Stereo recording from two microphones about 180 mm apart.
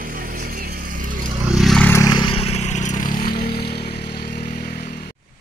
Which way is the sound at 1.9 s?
20° left (ahead or behind).